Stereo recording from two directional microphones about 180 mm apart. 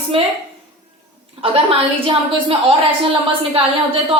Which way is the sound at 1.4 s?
30° right (ahead or behind).